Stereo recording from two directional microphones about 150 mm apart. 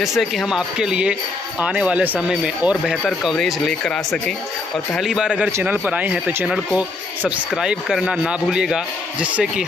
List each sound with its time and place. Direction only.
0.0 s speech: centre (ahead or behind)